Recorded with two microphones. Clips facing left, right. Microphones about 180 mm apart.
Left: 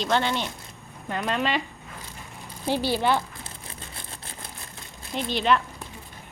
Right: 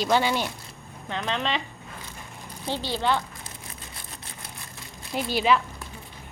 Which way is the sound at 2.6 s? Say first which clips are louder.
Left 3 dB; 10° left (ahead or behind).